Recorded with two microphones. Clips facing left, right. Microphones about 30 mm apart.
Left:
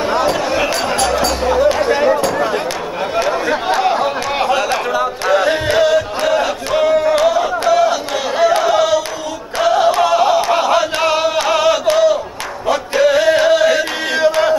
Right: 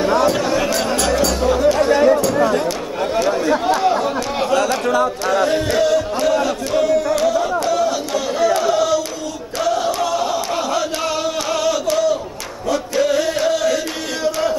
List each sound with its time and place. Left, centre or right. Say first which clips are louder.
0.0 s basketball bounce: even; centre
1.2 s music: left 1 dB; centre
3.2 s chatter: left 1 dB; left
9.6 s a sound: left 6 dB; left
12.6 s music: left 4 dB; left